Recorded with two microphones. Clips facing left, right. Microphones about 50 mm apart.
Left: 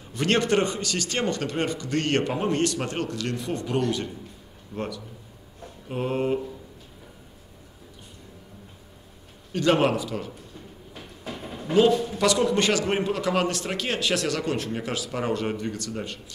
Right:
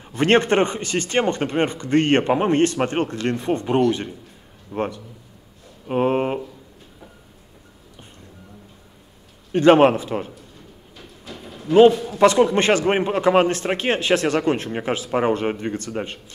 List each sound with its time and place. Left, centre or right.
0.1 s a man's voice: right
9.5 s a man's voice: right
11.4 s a sound: left
12.2 s a man's voice: right